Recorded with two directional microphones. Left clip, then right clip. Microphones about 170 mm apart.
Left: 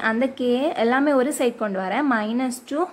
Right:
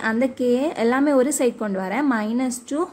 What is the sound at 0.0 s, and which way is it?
Speech, 10° right (ahead or behind).